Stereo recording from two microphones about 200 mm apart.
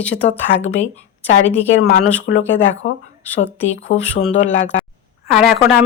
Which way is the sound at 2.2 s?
70° left (ahead or behind).